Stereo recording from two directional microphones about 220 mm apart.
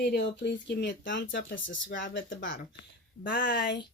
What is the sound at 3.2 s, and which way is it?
Speech, 40° left (ahead or behind).